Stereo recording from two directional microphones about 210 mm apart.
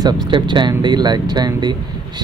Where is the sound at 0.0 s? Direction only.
20° right (ahead or behind).